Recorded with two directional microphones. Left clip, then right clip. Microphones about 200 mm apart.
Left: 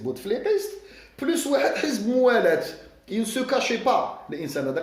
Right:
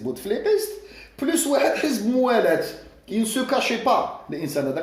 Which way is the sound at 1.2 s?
35° left (ahead or behind).